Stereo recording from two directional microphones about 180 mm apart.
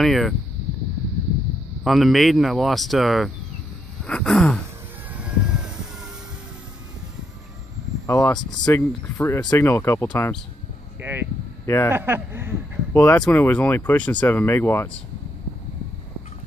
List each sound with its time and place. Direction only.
0.0 s speech: centre (ahead or behind)
1.9 s speech: centre (ahead or behind)
5.1 s a sound: 5° right (ahead or behind)
8.1 s speech: 20° left (ahead or behind)
11.0 s a sound: 10° right (ahead or behind)
11.6 s speech: 15° left (ahead or behind)
11.9 s speech: 10° right (ahead or behind)
12.9 s speech: 10° left (ahead or behind)